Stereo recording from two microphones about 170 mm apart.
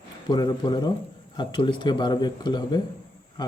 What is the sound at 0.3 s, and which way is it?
Speech, 25° left (ahead or behind).